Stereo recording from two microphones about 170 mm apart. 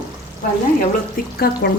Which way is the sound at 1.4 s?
60° left (ahead or behind).